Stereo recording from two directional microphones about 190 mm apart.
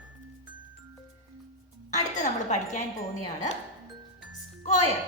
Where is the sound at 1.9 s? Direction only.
40° left (ahead or behind).